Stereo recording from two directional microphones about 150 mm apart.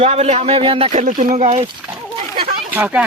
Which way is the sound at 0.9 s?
60° right (ahead or behind).